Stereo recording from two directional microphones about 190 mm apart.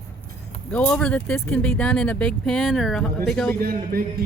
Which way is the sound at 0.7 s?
5° left (ahead or behind).